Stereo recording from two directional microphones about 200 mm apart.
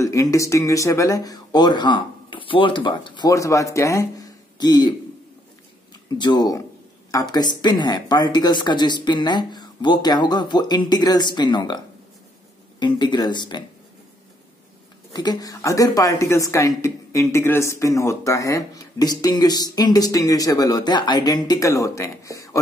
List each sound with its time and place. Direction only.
0.0 s a woman's voice: 15° left (ahead or behind)
6.0 s speech: 20° left (ahead or behind)
15.1 s a woman's voice: 20° left (ahead or behind)